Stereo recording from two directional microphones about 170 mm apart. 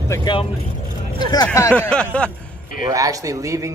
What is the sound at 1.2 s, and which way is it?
Speech, 25° left (ahead or behind).